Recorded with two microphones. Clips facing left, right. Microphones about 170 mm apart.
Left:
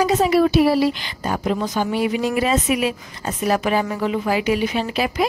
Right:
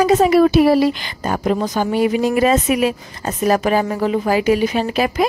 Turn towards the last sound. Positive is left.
turn(degrees=-45)  # may be behind; listen again after turning